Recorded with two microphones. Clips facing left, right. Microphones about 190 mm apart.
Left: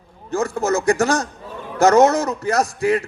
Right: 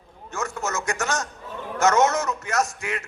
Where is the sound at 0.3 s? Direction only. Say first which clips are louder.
Left 10 dB; 35° left (ahead or behind).